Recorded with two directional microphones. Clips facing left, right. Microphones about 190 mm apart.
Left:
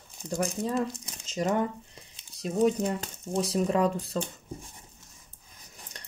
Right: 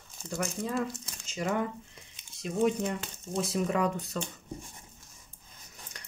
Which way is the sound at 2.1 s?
40° left (ahead or behind).